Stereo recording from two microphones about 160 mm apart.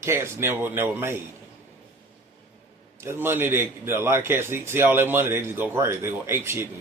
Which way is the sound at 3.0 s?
15° right (ahead or behind).